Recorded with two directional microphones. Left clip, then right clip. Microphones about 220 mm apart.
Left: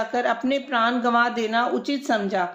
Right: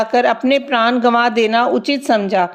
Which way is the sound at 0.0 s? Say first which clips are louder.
Right 9 dB; 40° right (ahead or behind).